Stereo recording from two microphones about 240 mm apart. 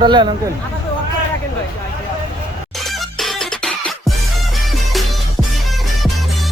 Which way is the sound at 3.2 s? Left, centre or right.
Centre.